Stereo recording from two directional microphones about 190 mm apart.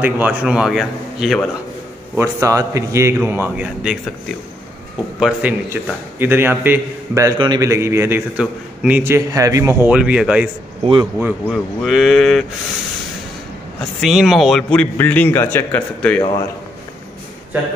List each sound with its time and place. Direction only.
0.0 s a man's voice: 5° right (ahead or behind)
2.1 s a man's voice: 15° right (ahead or behind)
5.2 s a man's voice: 10° right (ahead or behind)
10.8 s a man's voice: 25° right (ahead or behind)
11.4 s a man's voice: centre (ahead or behind)
13.7 s a man's voice: centre (ahead or behind)